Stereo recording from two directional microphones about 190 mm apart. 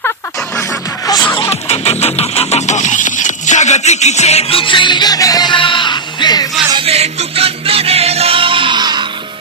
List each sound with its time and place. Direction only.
1.4 s music: 35° left (ahead or behind)
6.7 s music: 30° right (ahead or behind)